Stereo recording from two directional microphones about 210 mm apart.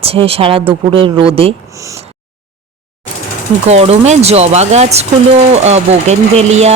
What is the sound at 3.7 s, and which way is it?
Speech, 30° right (ahead or behind).